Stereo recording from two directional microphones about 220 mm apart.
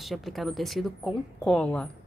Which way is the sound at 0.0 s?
Centre (ahead or behind).